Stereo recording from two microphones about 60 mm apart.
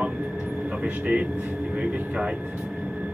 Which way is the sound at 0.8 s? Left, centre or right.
Centre.